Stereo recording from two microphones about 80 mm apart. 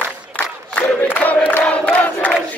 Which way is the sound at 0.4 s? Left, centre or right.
Centre.